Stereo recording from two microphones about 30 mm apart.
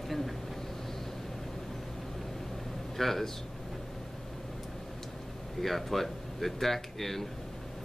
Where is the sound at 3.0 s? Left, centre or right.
Centre.